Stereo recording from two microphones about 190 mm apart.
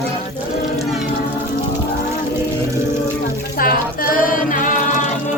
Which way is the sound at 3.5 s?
50° left (ahead or behind).